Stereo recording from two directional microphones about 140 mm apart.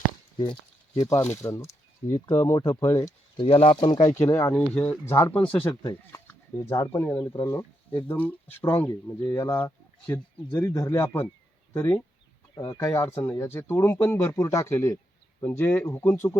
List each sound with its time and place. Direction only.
1.0 s speech: 20° left (ahead or behind)
2.1 s speech: 35° left (ahead or behind); by 3.1 s 15° left (ahead or behind)
3.3 s speech: 45° left (ahead or behind)
4.3 s speech: 20° left (ahead or behind)
4.5 s speech: 10° left (ahead or behind)